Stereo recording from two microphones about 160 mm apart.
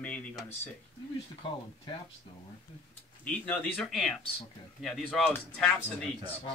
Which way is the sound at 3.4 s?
5° left (ahead or behind).